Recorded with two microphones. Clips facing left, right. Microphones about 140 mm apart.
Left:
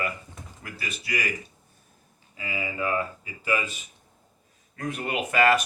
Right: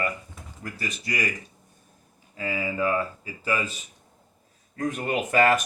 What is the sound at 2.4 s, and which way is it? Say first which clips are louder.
Speech: right 4 dB; 40° right (ahead or behind).